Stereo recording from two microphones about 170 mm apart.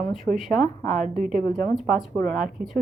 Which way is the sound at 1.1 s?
50° right (ahead or behind).